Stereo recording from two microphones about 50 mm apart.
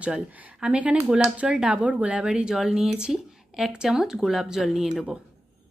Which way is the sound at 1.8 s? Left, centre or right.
Right.